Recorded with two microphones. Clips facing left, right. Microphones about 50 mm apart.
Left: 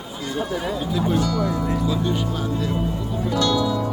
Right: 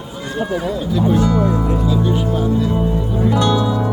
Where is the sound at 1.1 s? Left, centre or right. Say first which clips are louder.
Right 7 dB; right.